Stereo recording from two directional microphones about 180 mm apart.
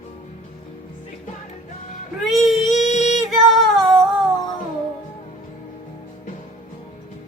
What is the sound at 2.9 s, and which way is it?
Music, 40° left (ahead or behind).